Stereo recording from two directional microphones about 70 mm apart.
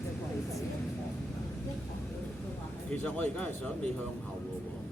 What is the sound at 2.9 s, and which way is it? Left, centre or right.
Speech, left.